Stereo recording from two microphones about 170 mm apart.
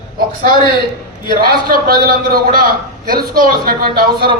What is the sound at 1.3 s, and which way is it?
A man's voice, 60° right (ahead or behind).